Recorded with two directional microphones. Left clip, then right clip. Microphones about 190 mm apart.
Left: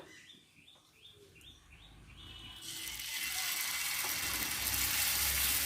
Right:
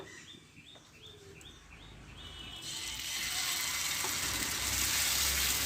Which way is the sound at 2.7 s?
10° left (ahead or behind).